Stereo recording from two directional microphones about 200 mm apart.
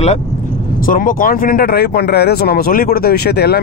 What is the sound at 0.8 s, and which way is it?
Speech, 45° left (ahead or behind).